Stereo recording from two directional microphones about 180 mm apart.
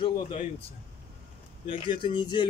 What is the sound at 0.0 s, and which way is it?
Speech, 35° left (ahead or behind).